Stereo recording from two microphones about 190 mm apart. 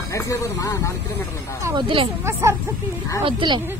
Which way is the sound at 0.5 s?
15° left (ahead or behind).